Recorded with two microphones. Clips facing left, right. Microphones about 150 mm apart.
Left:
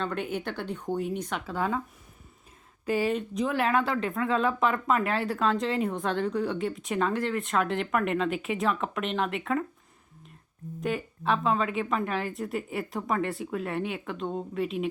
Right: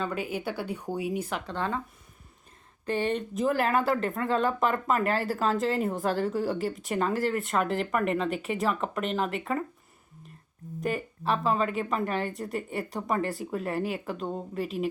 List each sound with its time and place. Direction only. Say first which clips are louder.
0.0 s speech: even; 5° right (ahead or behind)
1.5 s speech: left 5 dB; 5° left (ahead or behind)
2.8 s speech: left 1 dB; 5° left (ahead or behind)
10.8 s speech: even; centre (ahead or behind)